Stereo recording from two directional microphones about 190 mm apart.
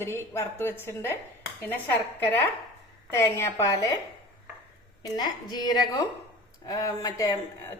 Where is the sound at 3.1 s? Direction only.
15° left (ahead or behind).